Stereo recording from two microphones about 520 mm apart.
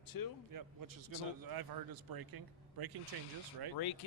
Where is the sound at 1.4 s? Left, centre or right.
Right.